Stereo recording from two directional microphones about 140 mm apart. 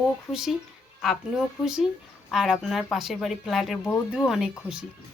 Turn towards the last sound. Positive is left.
turn(degrees=-5)  # may be behind; listen again after turning